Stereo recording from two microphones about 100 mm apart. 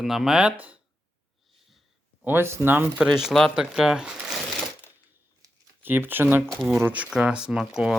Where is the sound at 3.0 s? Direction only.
5° right (ahead or behind).